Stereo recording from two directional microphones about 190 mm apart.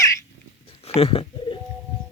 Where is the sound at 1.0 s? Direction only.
30° left (ahead or behind).